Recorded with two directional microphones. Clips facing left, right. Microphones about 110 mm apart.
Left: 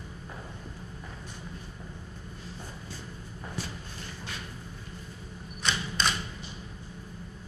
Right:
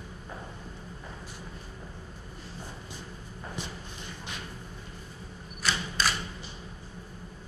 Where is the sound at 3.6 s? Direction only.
20° right (ahead or behind).